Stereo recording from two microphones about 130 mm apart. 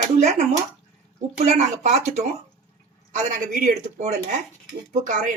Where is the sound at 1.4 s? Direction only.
60° right (ahead or behind).